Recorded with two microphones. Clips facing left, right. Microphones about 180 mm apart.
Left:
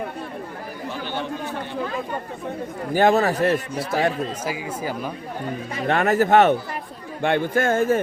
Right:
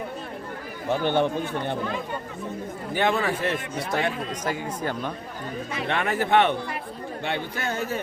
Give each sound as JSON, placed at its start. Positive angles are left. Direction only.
{"t": 0.9, "sound": "a man's voice", "side_deg": -55}
{"t": 2.9, "sound": "a man's voice", "side_deg": 40}
{"t": 4.4, "sound": "speech", "side_deg": 5}
{"t": 5.7, "sound": "speech", "side_deg": 45}